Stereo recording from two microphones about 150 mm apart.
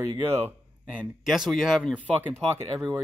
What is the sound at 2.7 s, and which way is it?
Speech, 20° right (ahead or behind).